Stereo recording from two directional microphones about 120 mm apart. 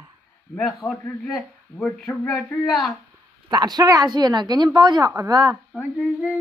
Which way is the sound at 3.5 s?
35° right (ahead or behind).